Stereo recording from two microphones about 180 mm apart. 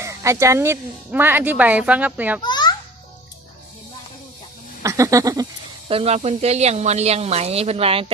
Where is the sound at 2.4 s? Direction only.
25° left (ahead or behind).